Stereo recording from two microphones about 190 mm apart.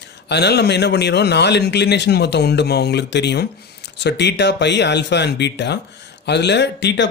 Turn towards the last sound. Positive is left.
turn(degrees=65)  # may be behind; listen again after turning